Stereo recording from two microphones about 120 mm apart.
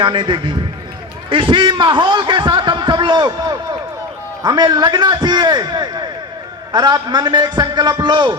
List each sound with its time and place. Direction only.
0.0 s a man's voice: 40° right (ahead or behind)